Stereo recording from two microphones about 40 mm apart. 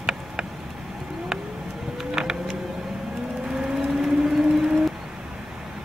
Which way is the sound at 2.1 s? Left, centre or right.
Centre.